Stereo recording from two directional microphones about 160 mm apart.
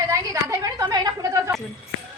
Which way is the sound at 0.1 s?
20° right (ahead or behind).